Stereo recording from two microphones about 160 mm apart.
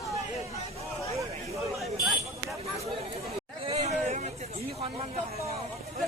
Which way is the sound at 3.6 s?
40° right (ahead or behind).